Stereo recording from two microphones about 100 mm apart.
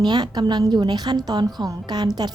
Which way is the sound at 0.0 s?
45° right (ahead or behind).